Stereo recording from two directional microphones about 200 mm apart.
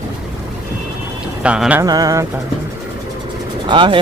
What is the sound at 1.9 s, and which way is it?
Speech, 20° right (ahead or behind).